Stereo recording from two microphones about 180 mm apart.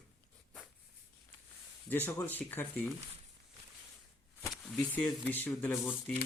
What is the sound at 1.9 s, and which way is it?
Speech, 10° left (ahead or behind).